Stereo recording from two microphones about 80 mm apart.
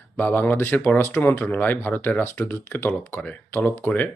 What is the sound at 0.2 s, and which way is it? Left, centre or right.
Speech, left.